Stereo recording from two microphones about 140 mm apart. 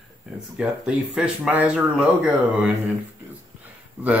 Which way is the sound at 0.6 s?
5° right (ahead or behind).